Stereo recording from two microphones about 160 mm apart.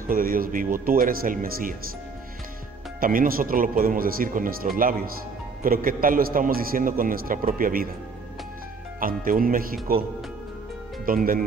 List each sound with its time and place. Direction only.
0.1 s a man's voice: 65° right (ahead or behind)
3.0 s a man's voice: 60° right (ahead or behind)
9.0 s a man's voice: 65° right (ahead or behind)
11.1 s a man's voice: 60° right (ahead or behind)